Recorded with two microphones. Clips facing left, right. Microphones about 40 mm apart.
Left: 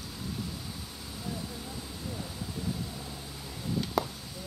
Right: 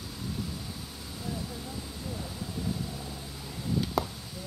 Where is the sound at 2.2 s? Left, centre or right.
Centre.